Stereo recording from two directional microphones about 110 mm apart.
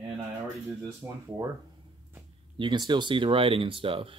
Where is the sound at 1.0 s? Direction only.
25° right (ahead or behind).